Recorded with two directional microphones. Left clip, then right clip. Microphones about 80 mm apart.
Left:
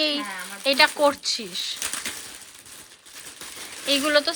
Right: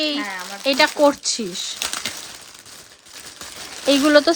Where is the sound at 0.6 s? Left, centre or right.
Right.